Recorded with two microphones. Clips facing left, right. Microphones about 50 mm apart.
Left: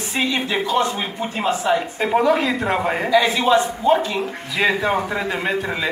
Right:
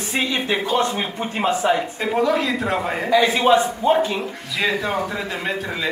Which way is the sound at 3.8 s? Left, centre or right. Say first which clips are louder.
Left 2 dB; right.